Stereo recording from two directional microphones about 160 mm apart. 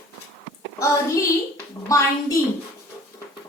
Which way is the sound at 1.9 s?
20° left (ahead or behind).